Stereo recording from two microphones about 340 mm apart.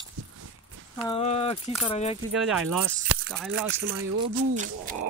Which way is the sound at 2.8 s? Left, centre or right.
Right.